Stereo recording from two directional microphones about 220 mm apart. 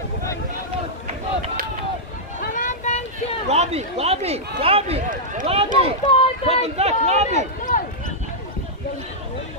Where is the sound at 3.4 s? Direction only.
30° right (ahead or behind).